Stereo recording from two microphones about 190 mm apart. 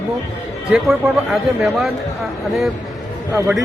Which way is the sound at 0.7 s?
5° right (ahead or behind).